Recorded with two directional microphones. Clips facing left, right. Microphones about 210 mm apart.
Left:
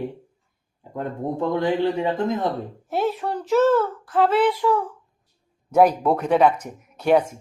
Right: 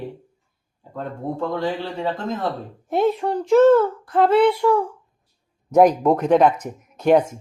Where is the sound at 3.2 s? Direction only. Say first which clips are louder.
Right 5 dB; 10° right (ahead or behind).